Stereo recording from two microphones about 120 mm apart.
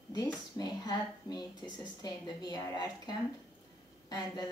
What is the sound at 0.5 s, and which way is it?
Speech, 35° left (ahead or behind).